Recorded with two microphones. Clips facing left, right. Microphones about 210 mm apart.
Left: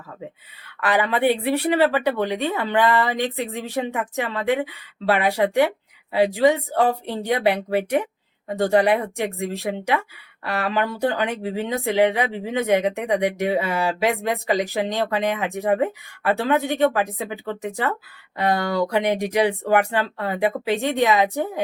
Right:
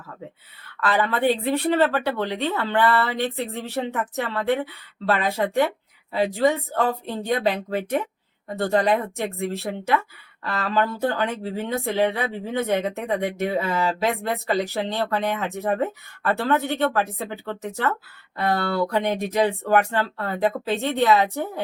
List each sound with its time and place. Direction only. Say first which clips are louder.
0.8 s speech: left 2 dB; 15° left (ahead or behind)